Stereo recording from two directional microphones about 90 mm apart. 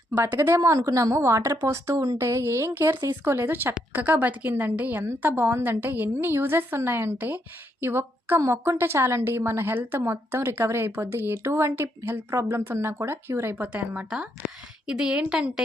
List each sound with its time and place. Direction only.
0.1 s a woman's voice: 25° right (ahead or behind)